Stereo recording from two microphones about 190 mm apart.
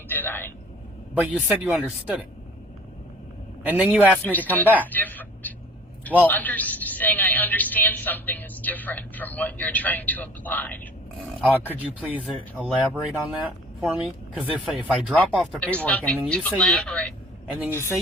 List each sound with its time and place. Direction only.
0.1 s vehicle: 10° left (ahead or behind)
1.1 s a man's voice: 5° right (ahead or behind)
3.7 s a man's voice: 5° right (ahead or behind)
4.2 s a woman's voice: 10° left (ahead or behind)
4.6 s a man's voice: 10° right (ahead or behind)
4.9 s a sound: 10° left (ahead or behind)
6.2 s a woman's voice: 10° left (ahead or behind)
11.8 s a woman's voice: 10° right (ahead or behind); by 17.9 s 15° left (ahead or behind)